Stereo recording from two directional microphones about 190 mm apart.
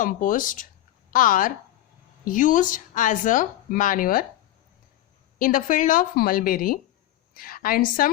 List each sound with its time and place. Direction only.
0.0 s speech: 45° left (ahead or behind)
5.4 s a woman's voice: 45° left (ahead or behind)